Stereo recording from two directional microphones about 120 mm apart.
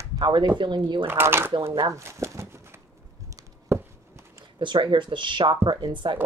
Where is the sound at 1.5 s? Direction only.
45° right (ahead or behind).